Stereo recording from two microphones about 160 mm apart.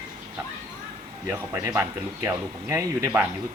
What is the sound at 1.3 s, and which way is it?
Speech, 10° right (ahead or behind).